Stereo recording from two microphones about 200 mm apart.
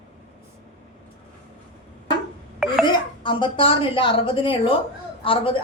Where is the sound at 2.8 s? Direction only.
25° left (ahead or behind).